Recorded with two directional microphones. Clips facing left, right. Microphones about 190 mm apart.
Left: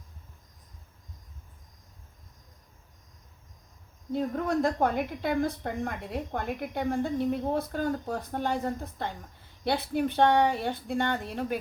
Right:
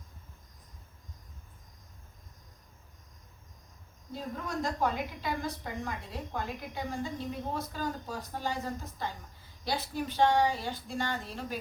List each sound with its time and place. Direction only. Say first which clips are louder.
4.1 s a woman's voice: left 9 dB; 55° left (ahead or behind)